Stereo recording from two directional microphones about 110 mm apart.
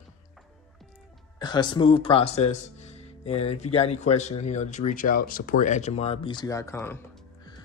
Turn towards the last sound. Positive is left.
turn(degrees=30)  # may be behind; listen again after turning